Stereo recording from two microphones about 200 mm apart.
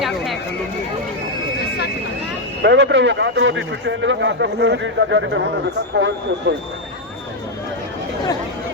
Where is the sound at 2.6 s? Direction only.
60° right (ahead or behind).